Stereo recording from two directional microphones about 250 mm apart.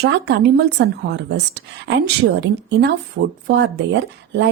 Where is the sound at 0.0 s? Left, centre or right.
Right.